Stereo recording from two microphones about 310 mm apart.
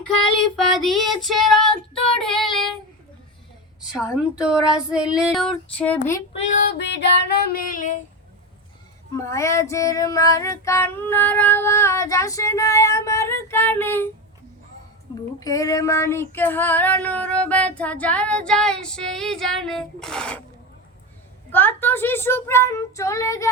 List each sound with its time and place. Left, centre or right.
0.5 s female singing: centre
2.1 s child singing: centre
3.9 s female singing: centre
6.3 s female singing: left
9.1 s child singing: centre
15.4 s female singing: centre
21.5 s child singing: centre